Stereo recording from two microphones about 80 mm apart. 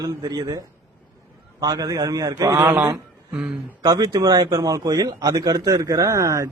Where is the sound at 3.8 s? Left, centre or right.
Right.